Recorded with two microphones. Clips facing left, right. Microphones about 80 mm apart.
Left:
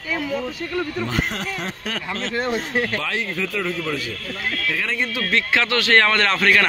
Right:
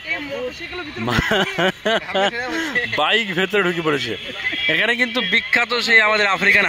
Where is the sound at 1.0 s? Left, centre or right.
Right.